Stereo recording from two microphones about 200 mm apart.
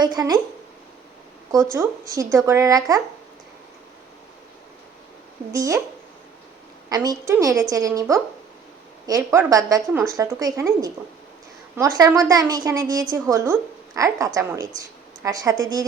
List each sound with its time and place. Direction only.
0.0 s a woman's voice: 20° right (ahead or behind)
1.7 s a woman's voice: 15° right (ahead or behind)
5.5 s a woman's voice: 15° right (ahead or behind)
6.9 s a woman's voice: 20° right (ahead or behind)